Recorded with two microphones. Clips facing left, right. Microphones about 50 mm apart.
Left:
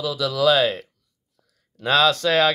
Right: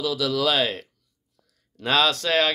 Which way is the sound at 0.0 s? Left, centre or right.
Centre.